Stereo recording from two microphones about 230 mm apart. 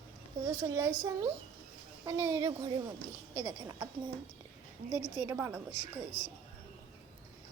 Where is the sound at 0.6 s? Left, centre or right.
Centre.